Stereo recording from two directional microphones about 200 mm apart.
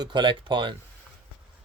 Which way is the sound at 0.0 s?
25° right (ahead or behind).